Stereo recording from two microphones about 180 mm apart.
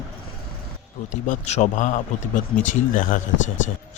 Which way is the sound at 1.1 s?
40° left (ahead or behind).